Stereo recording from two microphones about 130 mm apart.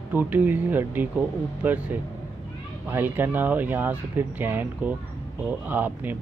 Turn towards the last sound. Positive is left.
turn(degrees=-15)  # may be behind; listen again after turning